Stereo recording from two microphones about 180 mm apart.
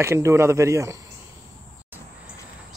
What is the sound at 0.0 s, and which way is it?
Speech, 15° right (ahead or behind).